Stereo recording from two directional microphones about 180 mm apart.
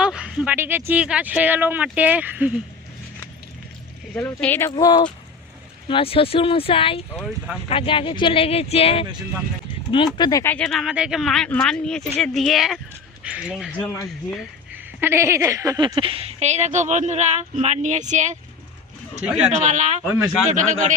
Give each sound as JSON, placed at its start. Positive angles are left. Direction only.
{"t": 0.0, "sound": "speech", "side_deg": -5}
{"t": 4.1, "sound": "speech", "side_deg": 10}
{"t": 4.7, "sound": "speech", "side_deg": 25}
{"t": 7.3, "sound": "speech", "side_deg": 0}
{"t": 7.7, "sound": "speech", "side_deg": 30}
{"t": 10.2, "sound": "speech", "side_deg": 20}
{"t": 10.5, "sound": "speech", "side_deg": 5}
{"t": 13.8, "sound": "speech", "side_deg": 10}
{"t": 14.7, "sound": "speech", "side_deg": -15}
{"t": 19.5, "sound": "a man's voice", "side_deg": -45}